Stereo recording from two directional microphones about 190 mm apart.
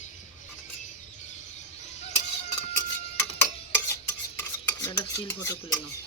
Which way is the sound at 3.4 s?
15° left (ahead or behind).